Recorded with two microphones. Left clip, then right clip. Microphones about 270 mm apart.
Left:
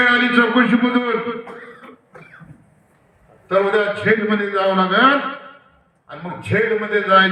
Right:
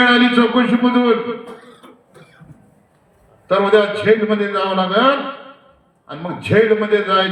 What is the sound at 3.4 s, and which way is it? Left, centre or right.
A man's voice, right.